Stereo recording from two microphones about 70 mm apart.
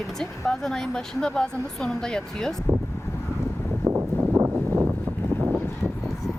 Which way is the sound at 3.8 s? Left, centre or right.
Right.